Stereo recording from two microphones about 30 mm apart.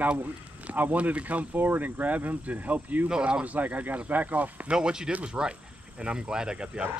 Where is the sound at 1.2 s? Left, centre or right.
Right.